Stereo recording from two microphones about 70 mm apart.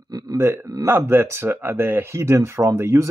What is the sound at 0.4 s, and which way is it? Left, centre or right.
Speech, right.